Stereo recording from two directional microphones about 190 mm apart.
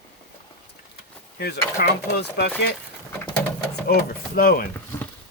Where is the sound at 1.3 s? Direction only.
60° left (ahead or behind).